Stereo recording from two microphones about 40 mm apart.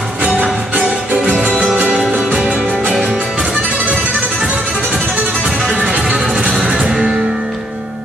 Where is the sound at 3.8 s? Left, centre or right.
Right; by 7.2 s centre.